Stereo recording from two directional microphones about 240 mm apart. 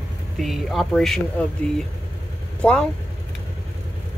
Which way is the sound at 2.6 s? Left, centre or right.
Centre.